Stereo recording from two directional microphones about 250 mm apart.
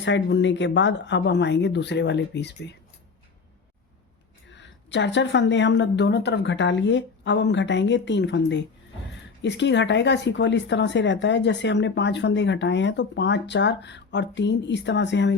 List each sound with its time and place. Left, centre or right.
0.0 s speech: left
4.4 s speech: left